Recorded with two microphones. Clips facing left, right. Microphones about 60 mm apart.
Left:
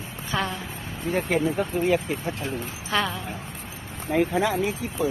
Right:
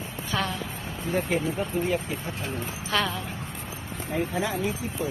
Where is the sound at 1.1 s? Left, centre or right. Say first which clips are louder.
Left 3 dB; left.